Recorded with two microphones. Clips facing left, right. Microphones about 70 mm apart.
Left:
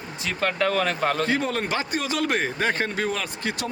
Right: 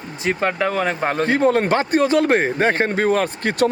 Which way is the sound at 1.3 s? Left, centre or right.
Right.